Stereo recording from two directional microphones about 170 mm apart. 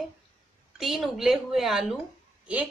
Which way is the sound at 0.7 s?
Centre (ahead or behind).